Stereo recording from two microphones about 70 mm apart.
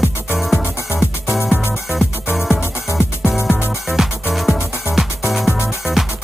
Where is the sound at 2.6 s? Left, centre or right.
Left.